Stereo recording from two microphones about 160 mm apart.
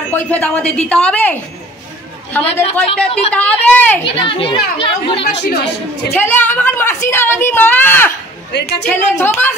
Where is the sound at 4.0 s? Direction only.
35° left (ahead or behind).